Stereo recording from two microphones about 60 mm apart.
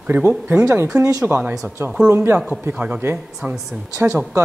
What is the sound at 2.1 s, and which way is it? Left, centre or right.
Speech, right.